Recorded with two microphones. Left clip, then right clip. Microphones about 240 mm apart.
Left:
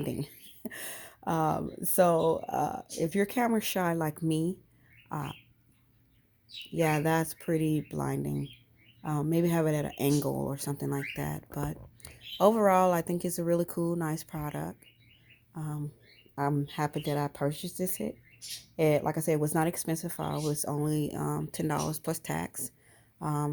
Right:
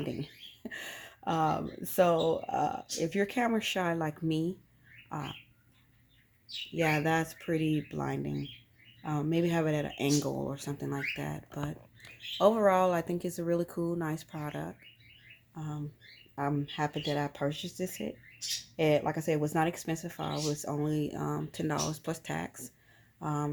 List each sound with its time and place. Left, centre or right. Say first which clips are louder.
0.0 s speech: left 2 dB; left
5.0 s bird: left 2 dB; left
6.7 s speech: left 1 dB; left